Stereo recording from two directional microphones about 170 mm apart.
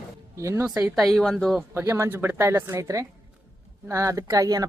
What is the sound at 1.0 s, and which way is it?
Speech, centre (ahead or behind).